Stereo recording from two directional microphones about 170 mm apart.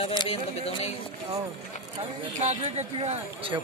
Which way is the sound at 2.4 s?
40° right (ahead or behind).